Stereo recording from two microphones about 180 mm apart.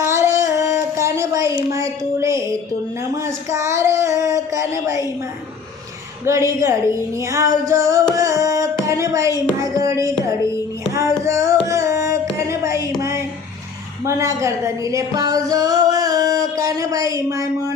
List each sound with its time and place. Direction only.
0.0 s a sound: 15° right (ahead or behind)
6.2 s music: 15° right (ahead or behind)
8.1 s carnatic music: 20° right (ahead or behind)
9.7 s music: 20° right (ahead or behind)
11.3 s music: 15° right (ahead or behind)
11.7 s carnatic music: 15° right (ahead or behind)
13.0 s a sound: 15° right (ahead or behind)